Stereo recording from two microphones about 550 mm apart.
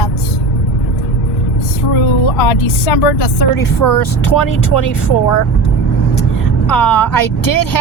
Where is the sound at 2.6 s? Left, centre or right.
Left.